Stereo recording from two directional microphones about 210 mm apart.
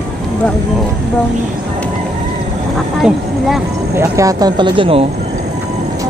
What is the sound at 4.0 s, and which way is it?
Speech, 15° right (ahead or behind).